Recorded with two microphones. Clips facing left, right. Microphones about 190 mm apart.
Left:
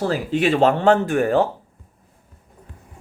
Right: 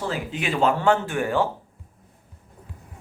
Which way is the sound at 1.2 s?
65° left (ahead or behind).